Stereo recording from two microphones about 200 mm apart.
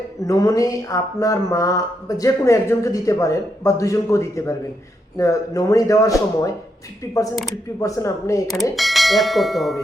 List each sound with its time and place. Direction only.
0.3 s speech: 15° left (ahead or behind)
7.8 s speech: 15° left (ahead or behind)
8.7 s speech: centre (ahead or behind)